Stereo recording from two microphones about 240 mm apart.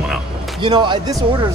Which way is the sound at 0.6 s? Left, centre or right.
Centre.